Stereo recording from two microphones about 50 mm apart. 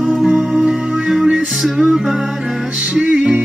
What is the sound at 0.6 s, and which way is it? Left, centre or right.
Music, centre.